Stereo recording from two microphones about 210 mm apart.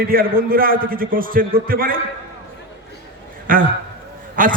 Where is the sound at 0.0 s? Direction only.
45° right (ahead or behind).